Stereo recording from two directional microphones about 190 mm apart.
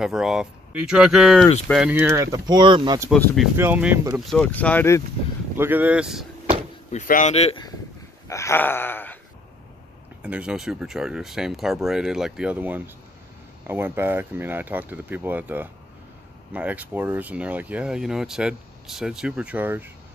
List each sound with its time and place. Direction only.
0.0 s speech: 5° right (ahead or behind)
2.3 s speech: 20° right (ahead or behind)
3.5 s speech: 10° right (ahead or behind)
4.3 s speech: 10° left (ahead or behind)
5.6 s speech: 10° right (ahead or behind)
6.9 s speech: 40° left (ahead or behind)
8.3 s a sound: 15° left (ahead or behind)
10.2 s speech: 5° right (ahead or behind)